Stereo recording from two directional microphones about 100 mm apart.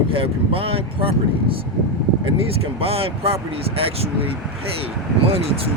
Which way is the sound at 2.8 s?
75° right (ahead or behind).